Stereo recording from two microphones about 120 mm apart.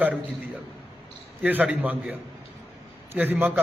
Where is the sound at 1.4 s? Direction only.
15° right (ahead or behind).